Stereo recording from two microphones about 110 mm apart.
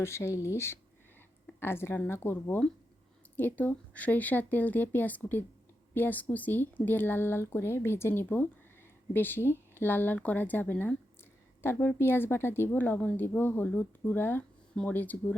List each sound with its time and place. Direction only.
0.0 s a woman's voice: 25° left (ahead or behind)